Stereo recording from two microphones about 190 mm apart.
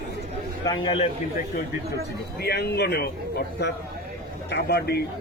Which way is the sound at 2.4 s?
55° left (ahead or behind).